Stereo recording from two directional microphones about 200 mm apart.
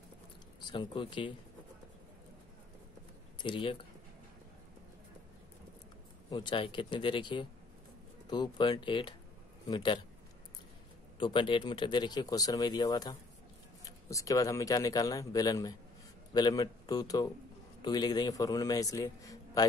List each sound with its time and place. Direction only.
0.6 s speech: 25° left (ahead or behind)
3.3 s speech: 25° left (ahead or behind)
6.3 s speech: 25° left (ahead or behind)
11.1 s speech: 25° left (ahead or behind)